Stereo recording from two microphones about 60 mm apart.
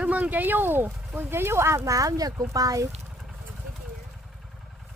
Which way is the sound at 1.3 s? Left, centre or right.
Right.